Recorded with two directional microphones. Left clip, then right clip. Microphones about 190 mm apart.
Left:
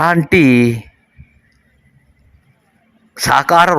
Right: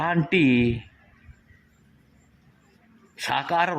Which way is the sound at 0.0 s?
25° left (ahead or behind).